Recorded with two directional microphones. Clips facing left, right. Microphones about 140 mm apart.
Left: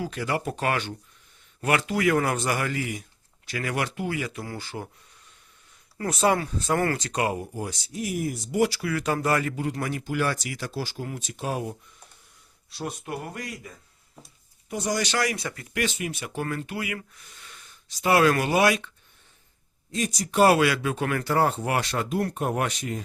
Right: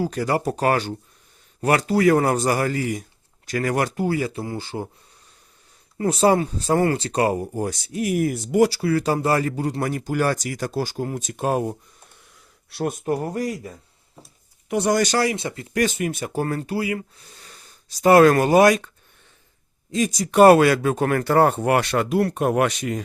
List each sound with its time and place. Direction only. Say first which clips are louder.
0.0 s speech: right 6 dB; 40° right (ahead or behind)
6.0 s speech: right 5 dB; 30° right (ahead or behind)
7.9 s speech: right 7 dB; 65° right (ahead or behind)
8.5 s speech: right 6 dB; 35° right (ahead or behind)
12.7 s speech: right 8 dB; 55° right (ahead or behind)
13.1 s speech: right 10 dB; 40° right (ahead or behind)
14.7 s speech: right 8 dB; 65° right (ahead or behind); by 15.2 s 50° right (ahead or behind)
15.2 s speech: right 5 dB; 25° right (ahead or behind)
15.7 s speech: right 7 dB; 45° right (ahead or behind)
20.4 s speech: right 7 dB; 45° right (ahead or behind); by 23.0 s 85° right